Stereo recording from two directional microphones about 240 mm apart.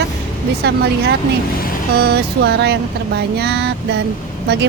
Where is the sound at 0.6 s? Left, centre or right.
Right.